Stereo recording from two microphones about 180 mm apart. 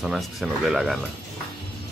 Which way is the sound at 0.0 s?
Centre (ahead or behind).